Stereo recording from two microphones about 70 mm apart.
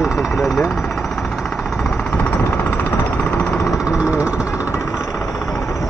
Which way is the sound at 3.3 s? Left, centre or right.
Centre.